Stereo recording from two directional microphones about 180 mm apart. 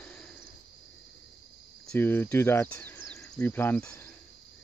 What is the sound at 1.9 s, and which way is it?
Speech, 10° left (ahead or behind).